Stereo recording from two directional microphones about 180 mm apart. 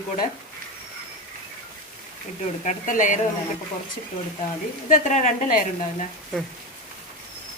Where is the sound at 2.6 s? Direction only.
45° left (ahead or behind).